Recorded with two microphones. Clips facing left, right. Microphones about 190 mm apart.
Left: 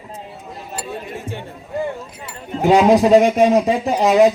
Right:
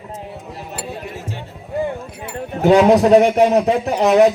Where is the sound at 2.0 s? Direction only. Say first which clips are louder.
Right 4 dB; 60° right (ahead or behind).